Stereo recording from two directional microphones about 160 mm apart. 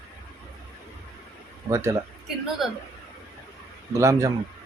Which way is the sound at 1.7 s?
20° right (ahead or behind).